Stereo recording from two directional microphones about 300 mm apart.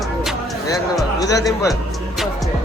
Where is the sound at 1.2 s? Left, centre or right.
Centre.